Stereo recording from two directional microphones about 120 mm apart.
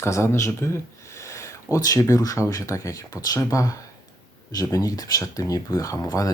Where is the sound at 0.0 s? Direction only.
25° left (ahead or behind).